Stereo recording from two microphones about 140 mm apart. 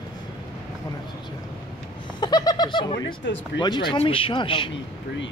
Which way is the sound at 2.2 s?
30° left (ahead or behind).